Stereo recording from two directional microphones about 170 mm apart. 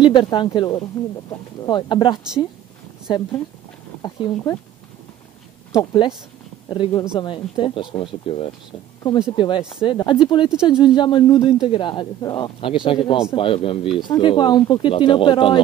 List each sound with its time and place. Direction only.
0.0 s speech: 30° left (ahead or behind)
1.0 s speech: 15° left (ahead or behind)
5.7 s speech: 20° left (ahead or behind)
10.5 s speech: 5° right (ahead or behind)
10.8 s speech: 25° left (ahead or behind)